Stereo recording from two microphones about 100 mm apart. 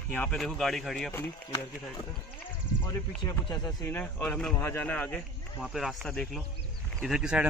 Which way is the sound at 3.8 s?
20° left (ahead or behind).